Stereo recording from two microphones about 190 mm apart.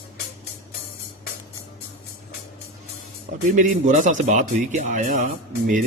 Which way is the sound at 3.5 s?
40° right (ahead or behind).